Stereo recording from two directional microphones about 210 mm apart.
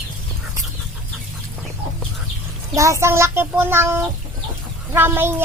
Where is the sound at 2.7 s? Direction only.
15° right (ahead or behind).